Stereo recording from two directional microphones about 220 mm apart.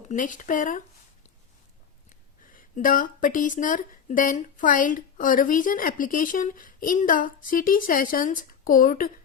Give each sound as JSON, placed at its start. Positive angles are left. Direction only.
{"t": 0.1, "sound": "speech", "side_deg": 35}
{"t": 2.5, "sound": "speech", "side_deg": 40}